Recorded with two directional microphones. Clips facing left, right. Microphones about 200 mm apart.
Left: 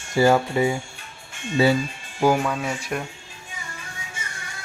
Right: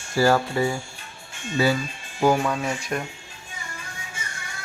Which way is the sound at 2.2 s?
5° left (ahead or behind).